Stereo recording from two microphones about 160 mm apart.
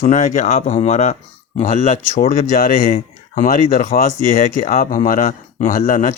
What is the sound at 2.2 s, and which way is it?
Speech, 60° left (ahead or behind).